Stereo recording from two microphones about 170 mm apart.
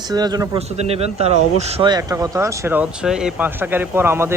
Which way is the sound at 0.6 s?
40° right (ahead or behind).